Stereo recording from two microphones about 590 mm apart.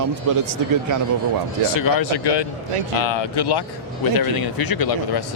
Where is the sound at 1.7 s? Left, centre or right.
Left.